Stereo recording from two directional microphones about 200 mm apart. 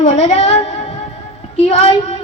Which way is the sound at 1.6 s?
35° left (ahead or behind).